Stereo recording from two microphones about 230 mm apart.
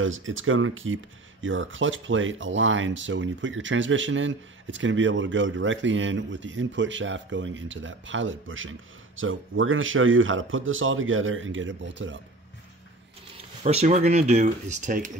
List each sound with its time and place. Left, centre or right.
0.0 s speech: right
13.7 s speech: right